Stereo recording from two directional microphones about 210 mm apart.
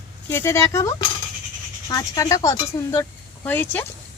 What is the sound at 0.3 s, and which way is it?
Speech, 10° left (ahead or behind).